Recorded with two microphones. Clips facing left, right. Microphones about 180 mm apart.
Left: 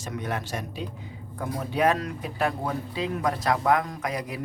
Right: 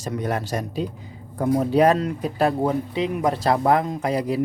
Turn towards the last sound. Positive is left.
turn(degrees=-30)  # may be behind; listen again after turning